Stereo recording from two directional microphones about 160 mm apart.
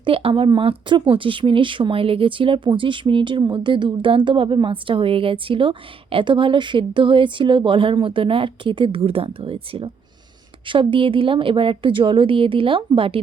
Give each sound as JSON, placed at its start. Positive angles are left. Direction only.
{"t": 0.0, "sound": "speech", "side_deg": -35}